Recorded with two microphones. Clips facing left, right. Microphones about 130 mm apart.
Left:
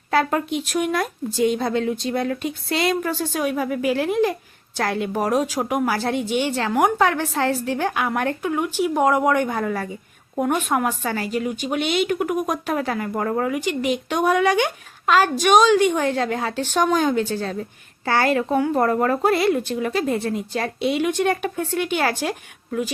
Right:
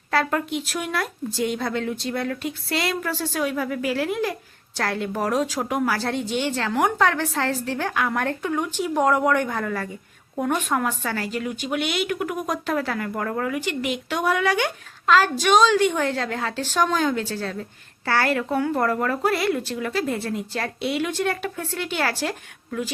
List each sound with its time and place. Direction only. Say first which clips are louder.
0.1 s a woman's voice: left 3 dB; 20° left (ahead or behind)